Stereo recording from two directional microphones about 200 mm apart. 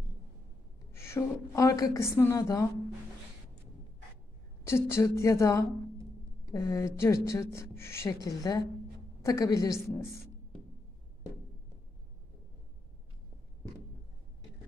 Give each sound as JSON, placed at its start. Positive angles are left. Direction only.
{"t": 0.9, "sound": "a woman's voice", "side_deg": 15}
{"t": 4.6, "sound": "a woman's voice", "side_deg": 15}